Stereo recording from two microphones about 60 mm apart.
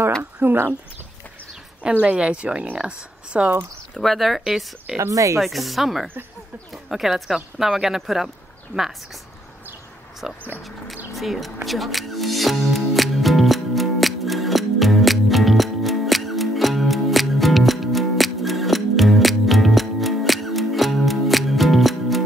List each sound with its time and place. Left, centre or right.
0.2 s a sound: right
2.0 s speech: centre
3.9 s speech: centre
4.9 s speech: right
5.4 s speech: centre
10.2 s speech: centre
11.1 s music: centre